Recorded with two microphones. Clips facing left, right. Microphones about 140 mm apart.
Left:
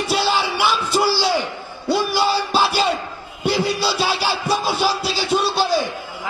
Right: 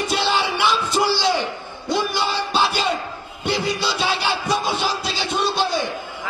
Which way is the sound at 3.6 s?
10° left (ahead or behind).